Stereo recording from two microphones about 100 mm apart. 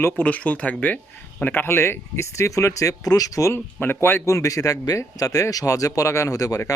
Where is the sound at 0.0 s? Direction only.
15° left (ahead or behind).